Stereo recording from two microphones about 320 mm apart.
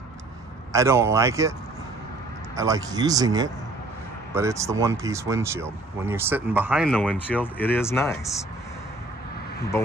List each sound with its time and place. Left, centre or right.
0.7 s speech: centre
2.5 s speech: centre